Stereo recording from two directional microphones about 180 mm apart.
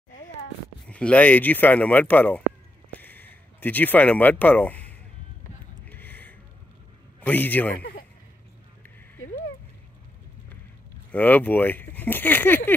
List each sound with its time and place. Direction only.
0.8 s speech: 5° left (ahead or behind)
3.0 s a sound: 10° left (ahead or behind)
5.9 s gasp: 10° left (ahead or behind)
7.2 s a man's voice: 10° left (ahead or behind)
11.1 s speech: 10° left (ahead or behind)